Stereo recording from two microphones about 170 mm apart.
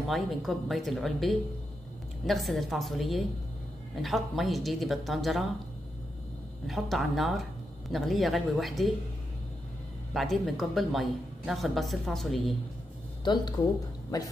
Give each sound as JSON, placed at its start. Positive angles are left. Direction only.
{"t": 0.1, "sound": "a woman's voice", "side_deg": 0}
{"t": 6.7, "sound": "a woman's voice", "side_deg": 0}
{"t": 10.1, "sound": "a woman's voice", "side_deg": 0}
{"t": 13.2, "sound": "speech", "side_deg": 25}